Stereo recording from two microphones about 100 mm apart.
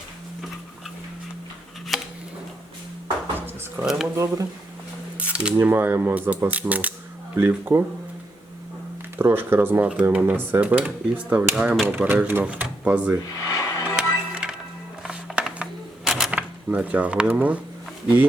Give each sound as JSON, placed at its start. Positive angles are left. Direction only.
{"t": 1.9, "sound": "a sound", "side_deg": 0}
{"t": 3.3, "sound": "a sound", "side_deg": -20}
{"t": 4.0, "sound": "speech", "side_deg": -30}
{"t": 5.3, "sound": "cutlery", "side_deg": -10}
{"t": 5.6, "sound": "speech", "side_deg": -20}
{"t": 9.1, "sound": "speech", "side_deg": -20}
{"t": 13.5, "sound": "music", "side_deg": 35}
{"t": 13.8, "sound": "music", "side_deg": -10}
{"t": 16.0, "sound": "a sound", "side_deg": -5}